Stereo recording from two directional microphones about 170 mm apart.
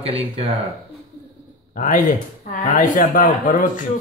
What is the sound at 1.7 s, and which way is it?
Speech, 50° left (ahead or behind).